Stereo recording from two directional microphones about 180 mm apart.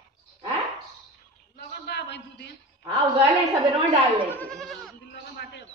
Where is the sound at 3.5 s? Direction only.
25° right (ahead or behind).